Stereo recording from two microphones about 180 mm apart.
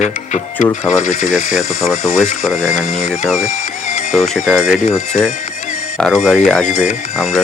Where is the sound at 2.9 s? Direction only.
40° left (ahead or behind).